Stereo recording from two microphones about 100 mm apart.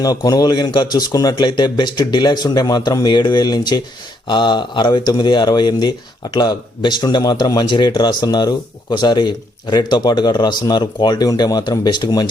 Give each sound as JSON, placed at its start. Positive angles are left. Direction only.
{"t": 0.0, "sound": "speech", "side_deg": 40}